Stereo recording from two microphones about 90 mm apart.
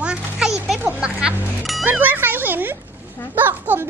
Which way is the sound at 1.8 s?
20° right (ahead or behind).